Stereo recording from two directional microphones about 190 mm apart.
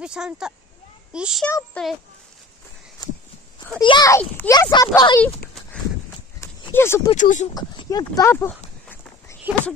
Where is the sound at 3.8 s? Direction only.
20° left (ahead or behind).